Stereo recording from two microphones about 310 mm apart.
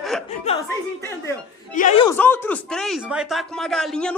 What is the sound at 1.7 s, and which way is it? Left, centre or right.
Speech, left.